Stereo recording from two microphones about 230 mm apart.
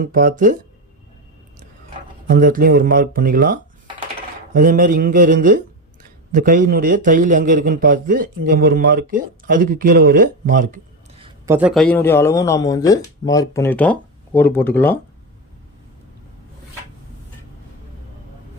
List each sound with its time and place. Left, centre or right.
0.0 s speech: right
2.2 s speech: right
11.2 s a sound: right
11.5 s speech: centre